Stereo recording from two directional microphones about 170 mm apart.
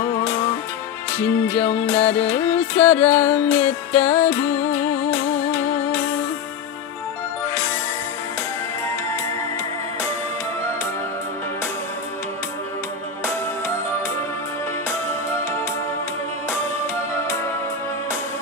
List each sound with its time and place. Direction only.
1.5 s music: 10° left (ahead or behind)
4.0 s music: 40° left (ahead or behind)
4.3 s music: 10° left (ahead or behind)